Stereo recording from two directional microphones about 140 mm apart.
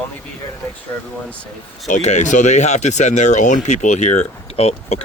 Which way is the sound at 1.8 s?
60° left (ahead or behind).